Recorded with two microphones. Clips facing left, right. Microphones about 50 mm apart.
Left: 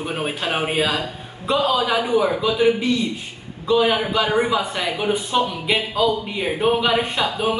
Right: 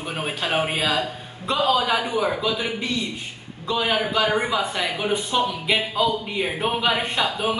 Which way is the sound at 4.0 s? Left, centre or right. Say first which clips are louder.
Left 2 dB; centre.